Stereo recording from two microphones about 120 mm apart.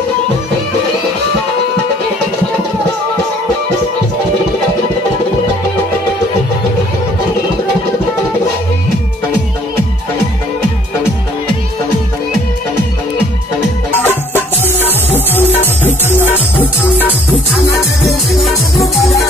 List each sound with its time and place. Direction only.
13.9 s music: 15° left (ahead or behind)
18.0 s music: centre (ahead or behind)